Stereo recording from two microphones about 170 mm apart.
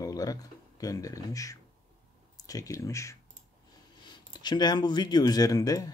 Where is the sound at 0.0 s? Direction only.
20° left (ahead or behind).